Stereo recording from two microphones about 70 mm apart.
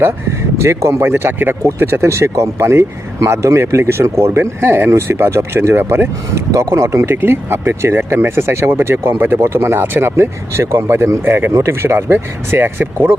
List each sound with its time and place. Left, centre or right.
0.6 s speech: right